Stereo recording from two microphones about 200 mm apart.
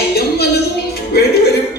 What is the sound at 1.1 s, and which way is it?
Music, 55° left (ahead or behind).